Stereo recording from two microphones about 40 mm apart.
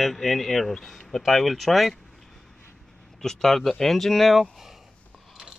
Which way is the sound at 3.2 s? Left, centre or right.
Centre.